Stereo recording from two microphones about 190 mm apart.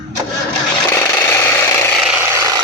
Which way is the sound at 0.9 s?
15° left (ahead or behind).